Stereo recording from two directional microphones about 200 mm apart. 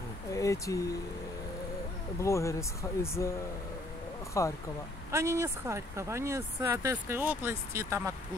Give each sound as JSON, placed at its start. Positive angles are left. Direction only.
{"t": 0.3, "sound": "speech", "side_deg": 15}
{"t": 2.1, "sound": "speech", "side_deg": 15}
{"t": 4.4, "sound": "speech", "side_deg": 15}
{"t": 5.1, "sound": "speech", "side_deg": -15}